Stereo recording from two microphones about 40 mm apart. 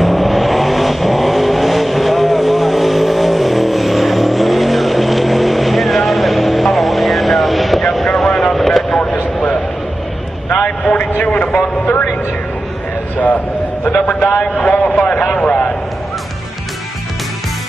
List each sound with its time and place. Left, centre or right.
0.0 s vehicle: centre
8.9 s vehicle: left
14.4 s a sound: left